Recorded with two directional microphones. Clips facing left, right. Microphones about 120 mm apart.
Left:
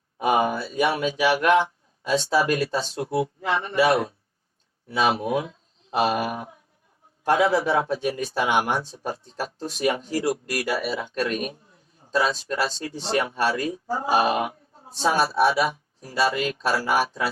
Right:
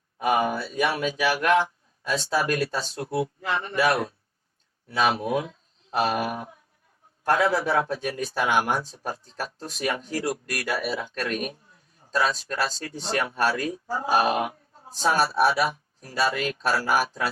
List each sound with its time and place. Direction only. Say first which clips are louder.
0.2 s speech: left 2 dB; 25° left (ahead or behind)